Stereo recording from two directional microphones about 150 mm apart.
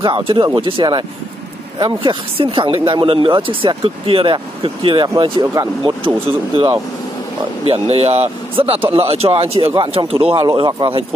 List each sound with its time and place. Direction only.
0.0 s speech: 35° right (ahead or behind)
10.4 s speech: 25° right (ahead or behind)